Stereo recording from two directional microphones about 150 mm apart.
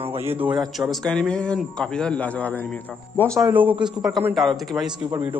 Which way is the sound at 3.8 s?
25° right (ahead or behind).